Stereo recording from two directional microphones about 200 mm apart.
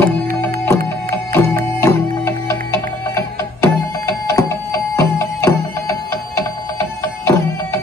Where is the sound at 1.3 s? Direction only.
15° left (ahead or behind).